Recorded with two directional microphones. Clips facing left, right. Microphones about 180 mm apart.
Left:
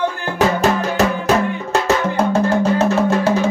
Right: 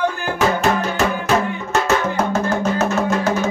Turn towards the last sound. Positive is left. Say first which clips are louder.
# left 3 dB
turn(degrees=30)  # may be behind; listen again after turning